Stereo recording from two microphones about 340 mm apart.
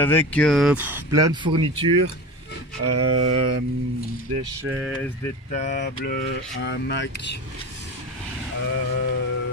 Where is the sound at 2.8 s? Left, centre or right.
Right.